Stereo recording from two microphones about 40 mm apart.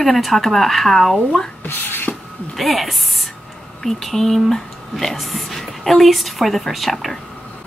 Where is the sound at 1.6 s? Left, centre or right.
Left.